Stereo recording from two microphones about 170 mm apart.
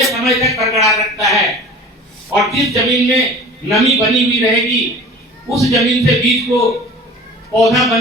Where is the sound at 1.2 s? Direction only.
Centre (ahead or behind).